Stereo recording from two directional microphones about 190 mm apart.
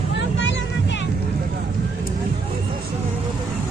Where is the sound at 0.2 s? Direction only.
75° left (ahead or behind).